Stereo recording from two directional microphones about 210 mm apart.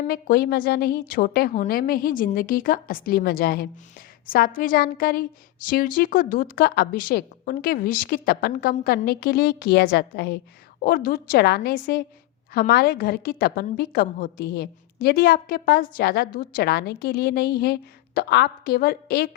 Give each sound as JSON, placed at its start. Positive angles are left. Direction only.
{"t": 0.1, "sound": "a woman's voice", "side_deg": 45}